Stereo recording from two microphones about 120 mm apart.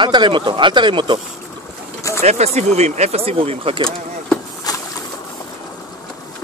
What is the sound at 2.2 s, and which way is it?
Speech, 65° right (ahead or behind).